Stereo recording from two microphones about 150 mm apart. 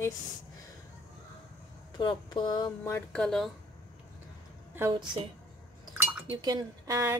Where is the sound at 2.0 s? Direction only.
30° left (ahead or behind).